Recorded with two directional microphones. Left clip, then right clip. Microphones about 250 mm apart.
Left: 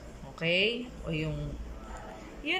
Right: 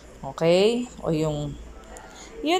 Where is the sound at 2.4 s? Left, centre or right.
Centre.